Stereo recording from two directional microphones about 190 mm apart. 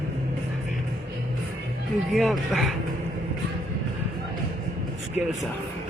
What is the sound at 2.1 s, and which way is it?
Speech, centre (ahead or behind).